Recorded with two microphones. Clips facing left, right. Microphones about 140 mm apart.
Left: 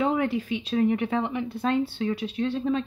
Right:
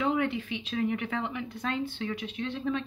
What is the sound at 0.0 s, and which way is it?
Speech, 40° left (ahead or behind).